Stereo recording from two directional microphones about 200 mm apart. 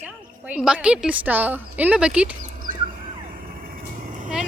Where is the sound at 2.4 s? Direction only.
45° right (ahead or behind).